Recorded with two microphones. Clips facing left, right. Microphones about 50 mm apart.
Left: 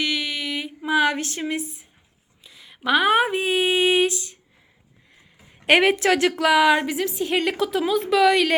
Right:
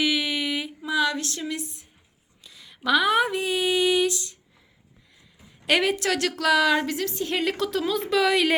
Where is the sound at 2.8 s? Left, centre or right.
Left.